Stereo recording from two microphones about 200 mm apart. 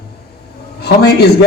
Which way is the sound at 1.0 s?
55° left (ahead or behind).